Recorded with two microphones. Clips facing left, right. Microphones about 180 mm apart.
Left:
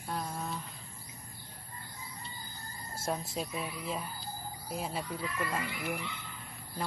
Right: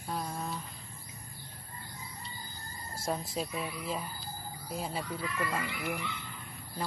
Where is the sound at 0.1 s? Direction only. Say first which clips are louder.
Right 1 dB; centre (ahead or behind).